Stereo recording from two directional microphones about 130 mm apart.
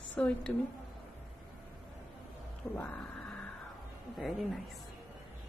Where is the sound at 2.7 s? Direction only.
15° left (ahead or behind).